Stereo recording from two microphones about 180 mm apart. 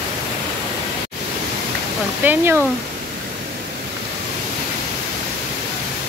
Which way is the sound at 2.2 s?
10° right (ahead or behind).